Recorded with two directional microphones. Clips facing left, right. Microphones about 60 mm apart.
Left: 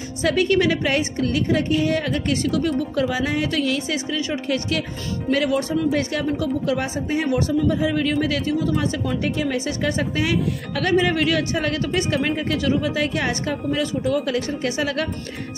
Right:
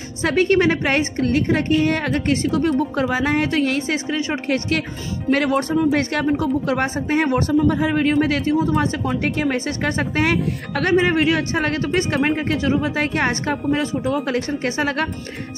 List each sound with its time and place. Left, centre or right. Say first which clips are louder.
0.2 s a woman's voice: right 2 dB; right
5.9 s speech: right 3 dB; right
6.2 s a woman's voice: right 3 dB; right
9.2 s a woman's voice: right 2 dB; right
11.5 s a woman's voice: right 2 dB; right